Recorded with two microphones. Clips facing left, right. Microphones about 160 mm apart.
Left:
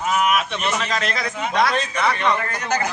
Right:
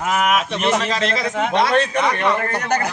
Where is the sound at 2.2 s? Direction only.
50° right (ahead or behind).